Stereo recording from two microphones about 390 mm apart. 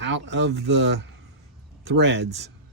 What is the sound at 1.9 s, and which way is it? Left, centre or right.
Speech, right.